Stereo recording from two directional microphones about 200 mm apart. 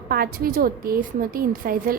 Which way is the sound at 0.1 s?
45° right (ahead or behind).